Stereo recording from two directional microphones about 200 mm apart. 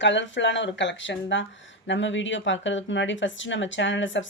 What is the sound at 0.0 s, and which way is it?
Speech, 65° left (ahead or behind).